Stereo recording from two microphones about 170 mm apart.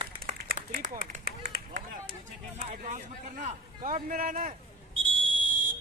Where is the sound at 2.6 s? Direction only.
45° right (ahead or behind).